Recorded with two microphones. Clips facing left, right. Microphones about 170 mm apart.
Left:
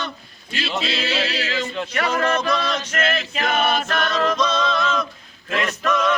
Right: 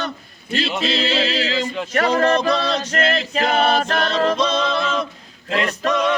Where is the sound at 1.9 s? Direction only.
40° right (ahead or behind).